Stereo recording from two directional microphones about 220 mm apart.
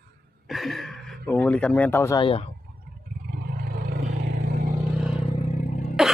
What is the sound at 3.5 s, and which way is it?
Vehicle, 40° right (ahead or behind).